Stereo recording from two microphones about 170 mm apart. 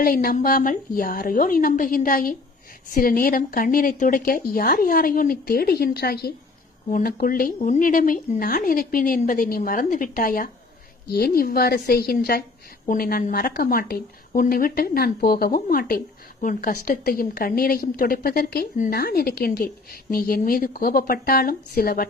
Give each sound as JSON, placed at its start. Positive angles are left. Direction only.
{"t": 0.0, "sound": "a woman's voice", "side_deg": 55}